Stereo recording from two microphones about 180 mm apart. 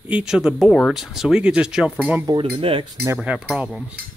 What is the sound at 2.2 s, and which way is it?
Speech, 25° right (ahead or behind).